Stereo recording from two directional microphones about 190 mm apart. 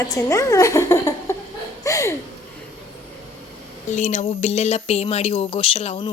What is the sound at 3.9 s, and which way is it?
Speech, 35° left (ahead or behind).